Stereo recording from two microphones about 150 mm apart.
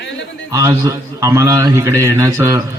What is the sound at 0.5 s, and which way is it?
A man's voice, 20° right (ahead or behind).